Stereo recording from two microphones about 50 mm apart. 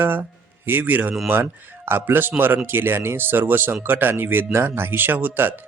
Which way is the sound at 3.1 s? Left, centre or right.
Right.